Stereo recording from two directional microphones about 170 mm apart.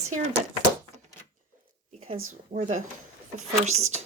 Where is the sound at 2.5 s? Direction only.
45° right (ahead or behind).